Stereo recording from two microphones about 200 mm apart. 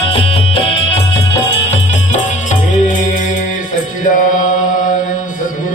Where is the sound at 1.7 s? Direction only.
35° left (ahead or behind).